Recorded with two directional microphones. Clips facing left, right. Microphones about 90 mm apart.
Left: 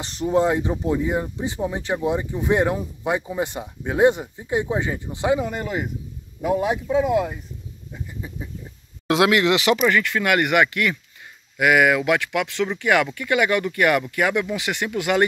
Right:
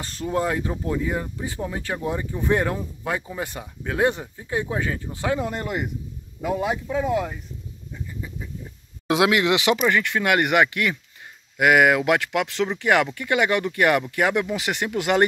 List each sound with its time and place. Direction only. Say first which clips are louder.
0.0 s speech: left 5 dB; 20° left (ahead or behind)
5.4 s speech: left 1 dB; centre (ahead or behind)
7.9 s bird: even; 20° left (ahead or behind)
9.0 s speech: left 2 dB; 10° right (ahead or behind)
11.5 s speech: even; 45° right (ahead or behind)